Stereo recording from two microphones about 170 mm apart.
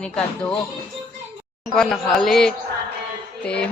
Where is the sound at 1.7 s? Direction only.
Centre (ahead or behind).